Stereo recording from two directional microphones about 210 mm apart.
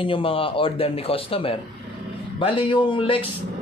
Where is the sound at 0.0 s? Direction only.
25° left (ahead or behind).